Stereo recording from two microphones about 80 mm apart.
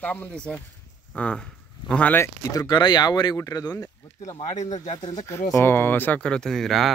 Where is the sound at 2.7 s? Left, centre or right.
Left.